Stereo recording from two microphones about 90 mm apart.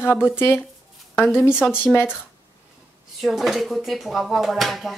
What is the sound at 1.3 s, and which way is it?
Speech, 10° right (ahead or behind).